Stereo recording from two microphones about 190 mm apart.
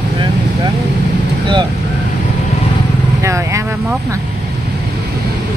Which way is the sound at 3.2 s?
15° right (ahead or behind).